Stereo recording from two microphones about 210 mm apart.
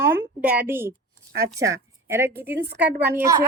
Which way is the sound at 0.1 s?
10° right (ahead or behind).